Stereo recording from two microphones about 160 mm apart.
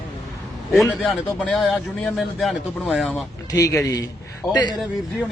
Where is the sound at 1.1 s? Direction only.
Centre (ahead or behind).